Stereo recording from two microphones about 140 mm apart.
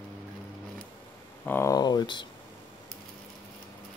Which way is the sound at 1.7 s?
30° left (ahead or behind).